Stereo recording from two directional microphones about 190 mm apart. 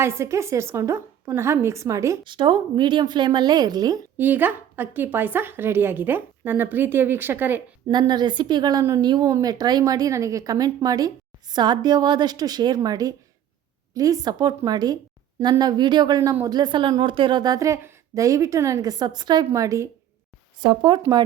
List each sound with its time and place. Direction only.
0.0 s speech: 15° right (ahead or behind)
7.9 s a woman's voice: 20° right (ahead or behind)